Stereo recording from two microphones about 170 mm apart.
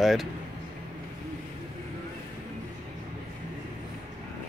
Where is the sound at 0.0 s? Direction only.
Centre (ahead or behind).